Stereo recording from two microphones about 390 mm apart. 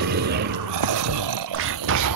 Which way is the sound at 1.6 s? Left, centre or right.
Right.